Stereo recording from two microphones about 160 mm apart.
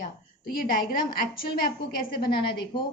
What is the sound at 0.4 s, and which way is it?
A woman's voice, 65° left (ahead or behind).